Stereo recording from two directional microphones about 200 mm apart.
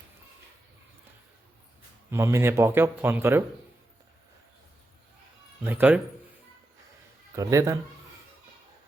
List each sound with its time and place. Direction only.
2.0 s speech: 15° right (ahead or behind)
5.6 s speech: 10° right (ahead or behind)
7.3 s speech: 15° right (ahead or behind)